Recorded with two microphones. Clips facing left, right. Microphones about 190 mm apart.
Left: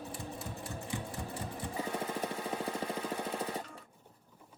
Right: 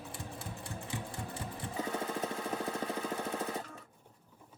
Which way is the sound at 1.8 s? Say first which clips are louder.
Right 1 dB; 10° left (ahead or behind).